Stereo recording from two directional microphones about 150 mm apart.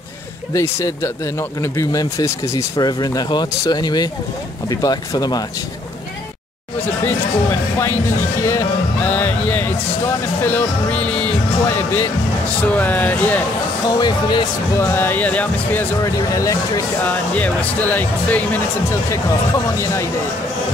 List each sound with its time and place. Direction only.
0.5 s speech: 20° left (ahead or behind)
8.4 s speech: 20° left (ahead or behind)
13.8 s speech: 30° left (ahead or behind)
14.8 s speech: 15° left (ahead or behind)
16.0 s speech: 25° left (ahead or behind)
17.0 s speech: 10° left (ahead or behind)